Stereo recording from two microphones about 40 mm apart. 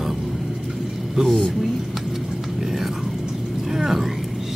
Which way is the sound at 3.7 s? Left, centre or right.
Centre.